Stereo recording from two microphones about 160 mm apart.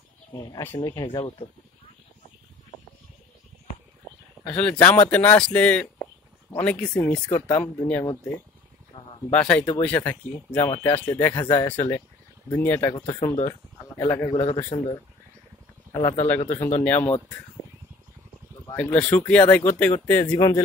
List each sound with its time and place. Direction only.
0.4 s speech: 20° left (ahead or behind)
4.5 s speech: 10° left (ahead or behind)
8.9 s a sound: 30° left (ahead or behind)
9.3 s speech: 10° left (ahead or behind)
14.4 s a man's voice: 35° left (ahead or behind); by 17.1 s 10° left (ahead or behind)
18.7 s speech: 10° left (ahead or behind)